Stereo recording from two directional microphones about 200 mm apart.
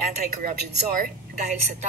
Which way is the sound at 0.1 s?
40° right (ahead or behind).